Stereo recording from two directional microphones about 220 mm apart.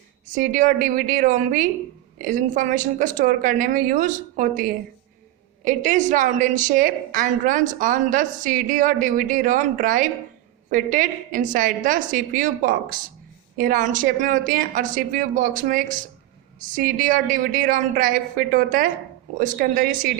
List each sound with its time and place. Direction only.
0.3 s a woman's voice: 35° right (ahead or behind)